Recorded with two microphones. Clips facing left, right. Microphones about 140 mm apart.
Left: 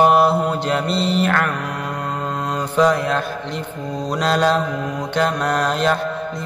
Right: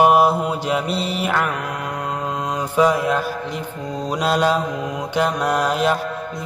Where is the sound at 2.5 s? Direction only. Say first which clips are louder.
Left 1 dB; 10° right (ahead or behind).